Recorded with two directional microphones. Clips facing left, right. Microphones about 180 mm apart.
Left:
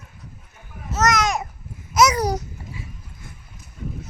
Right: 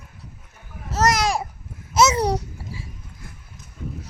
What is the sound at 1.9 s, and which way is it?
Babbling, 25° right (ahead or behind).